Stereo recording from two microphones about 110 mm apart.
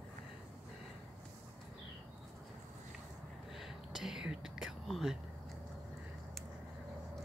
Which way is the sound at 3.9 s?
5° right (ahead or behind).